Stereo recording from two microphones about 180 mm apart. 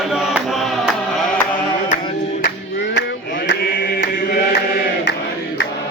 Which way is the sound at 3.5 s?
60° left (ahead or behind).